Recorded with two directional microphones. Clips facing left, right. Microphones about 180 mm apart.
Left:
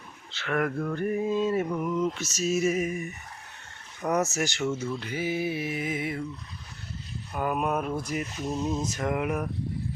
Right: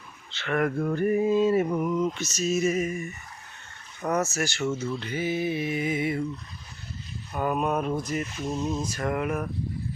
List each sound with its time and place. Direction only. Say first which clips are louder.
0.3 s speech: right 2 dB; centre (ahead or behind)
0.8 s a sound: right 4 dB; 10° right (ahead or behind)
1.8 s mantra: right 2 dB; 5° right (ahead or behind)
7.3 s mantra: right 2 dB; 5° left (ahead or behind)
8.8 s mantra: even; 20° left (ahead or behind)